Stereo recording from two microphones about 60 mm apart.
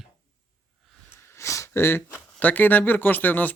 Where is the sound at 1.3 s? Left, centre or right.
Left.